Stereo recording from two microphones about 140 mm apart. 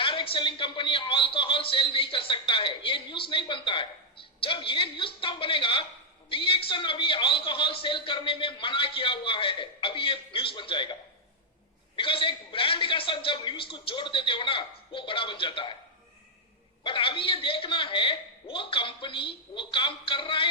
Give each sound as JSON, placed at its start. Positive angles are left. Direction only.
{"t": 0.0, "sound": "a man's voice", "side_deg": 35}
{"t": 11.9, "sound": "a man's voice", "side_deg": 40}
{"t": 16.8, "sound": "a man's voice", "side_deg": 40}